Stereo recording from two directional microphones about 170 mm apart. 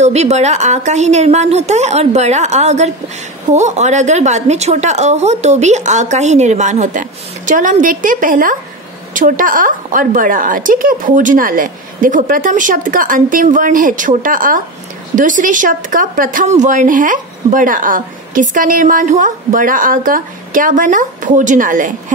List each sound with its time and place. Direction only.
0.0 s a woman's voice: 40° right (ahead or behind)